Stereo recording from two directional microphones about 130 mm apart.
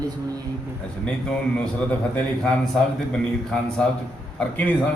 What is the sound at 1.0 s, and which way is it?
A man's voice, 5° left (ahead or behind).